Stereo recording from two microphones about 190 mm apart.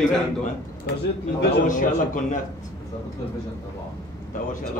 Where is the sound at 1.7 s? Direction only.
45° left (ahead or behind).